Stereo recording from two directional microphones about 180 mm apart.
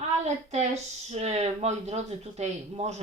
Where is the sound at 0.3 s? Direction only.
40° right (ahead or behind).